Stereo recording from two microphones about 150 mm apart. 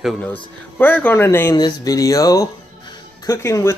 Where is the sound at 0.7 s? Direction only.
10° left (ahead or behind).